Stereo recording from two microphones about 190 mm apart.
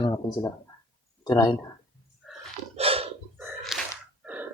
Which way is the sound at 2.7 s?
30° right (ahead or behind).